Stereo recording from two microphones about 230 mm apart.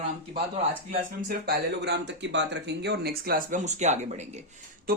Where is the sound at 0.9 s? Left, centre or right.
Right.